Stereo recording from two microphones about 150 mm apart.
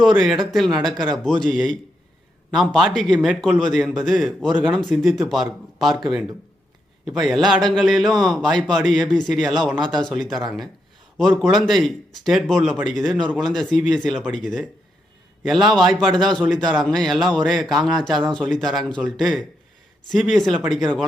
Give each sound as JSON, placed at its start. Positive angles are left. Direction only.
{"t": 0.0, "sound": "a man's voice", "side_deg": 0}
{"t": 7.0, "sound": "a man's voice", "side_deg": 0}